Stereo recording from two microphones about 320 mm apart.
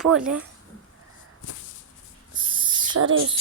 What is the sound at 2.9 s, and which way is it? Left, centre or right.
Speech, right.